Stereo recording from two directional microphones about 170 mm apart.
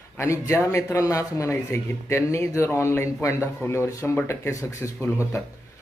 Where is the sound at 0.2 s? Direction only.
15° left (ahead or behind).